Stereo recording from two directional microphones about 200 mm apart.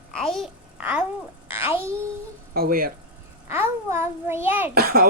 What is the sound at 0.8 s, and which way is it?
Speech, 10° right (ahead or behind).